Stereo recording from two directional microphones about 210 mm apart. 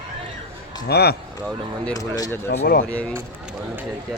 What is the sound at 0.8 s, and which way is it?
Speech, 50° left (ahead or behind).